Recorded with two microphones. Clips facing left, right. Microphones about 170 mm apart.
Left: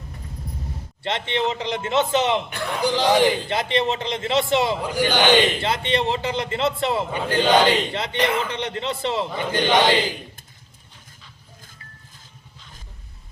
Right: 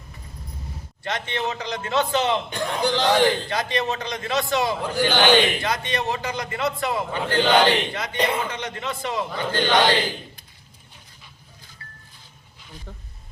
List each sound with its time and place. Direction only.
1.0 s a man's voice: 25° left (ahead or behind)
2.6 s a man's voice: 15° right (ahead or behind)
2.8 s speech: 10° left (ahead or behind)
3.5 s a man's voice: 25° left (ahead or behind)
4.8 s speech: 10° left (ahead or behind)
5.6 s a man's voice: 25° left (ahead or behind)
8.4 s a man's voice: 30° left (ahead or behind)
11.8 s music: 20° left (ahead or behind)